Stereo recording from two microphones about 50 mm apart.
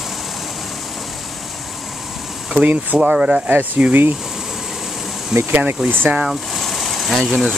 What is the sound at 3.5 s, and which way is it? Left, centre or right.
Speech, right.